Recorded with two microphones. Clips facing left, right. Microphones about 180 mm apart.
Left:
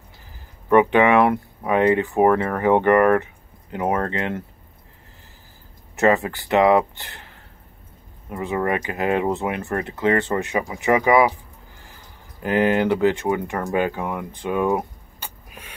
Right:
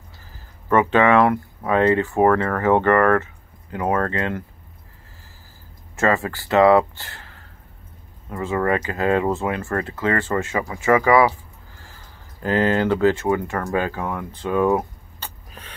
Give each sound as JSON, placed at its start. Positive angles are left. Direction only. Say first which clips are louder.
{"t": 0.7, "sound": "speech", "louder": "left 1 dB", "side_deg": 15}
{"t": 5.9, "sound": "speech", "louder": "left 2 dB", "side_deg": 20}